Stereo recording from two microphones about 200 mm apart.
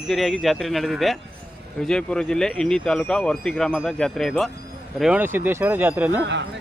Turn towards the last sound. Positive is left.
turn(degrees=-10)  # may be behind; listen again after turning